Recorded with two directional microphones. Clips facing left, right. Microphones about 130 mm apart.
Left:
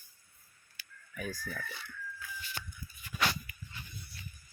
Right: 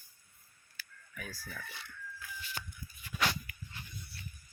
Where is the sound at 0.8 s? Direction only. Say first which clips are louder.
Left 6 dB; 20° left (ahead or behind).